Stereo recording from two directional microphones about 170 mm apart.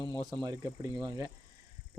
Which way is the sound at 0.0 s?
25° left (ahead or behind).